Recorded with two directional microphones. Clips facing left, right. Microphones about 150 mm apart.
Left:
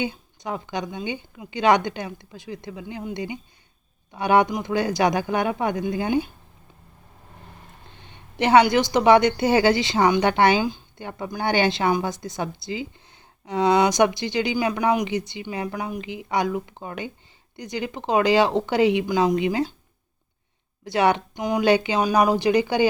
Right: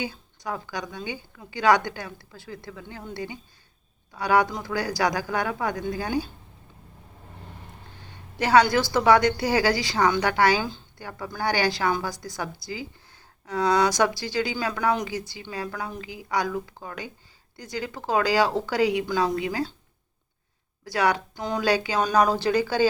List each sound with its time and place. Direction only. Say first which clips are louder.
0.0 s a woman's voice: left 4 dB; 20° left (ahead or behind)
7.9 s a woman's voice: left 3 dB; 20° left (ahead or behind)
20.8 s a woman's voice: left 4 dB; 25° left (ahead or behind)